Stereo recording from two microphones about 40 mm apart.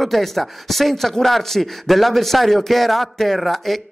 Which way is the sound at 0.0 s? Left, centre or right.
Centre.